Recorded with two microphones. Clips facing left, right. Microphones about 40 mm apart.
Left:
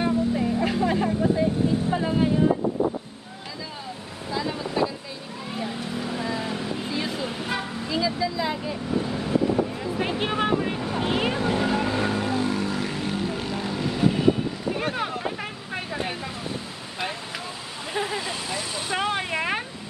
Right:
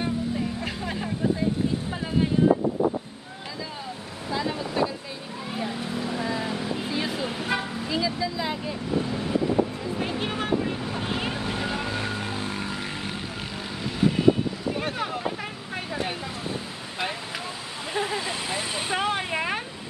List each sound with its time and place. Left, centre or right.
0.0 s vehicle: centre
1.9 s music: centre
4.3 s vehicle: centre
9.8 s a sound: centre
10.8 s boat: centre
11.1 s vehicle: centre
11.3 s vehicle: centre
12.4 s vehicle: centre
13.3 s vehicle: centre
16.4 s a sound: centre
17.9 s vehicle: centre
18.3 s vehicle: right
18.9 s vehicle: centre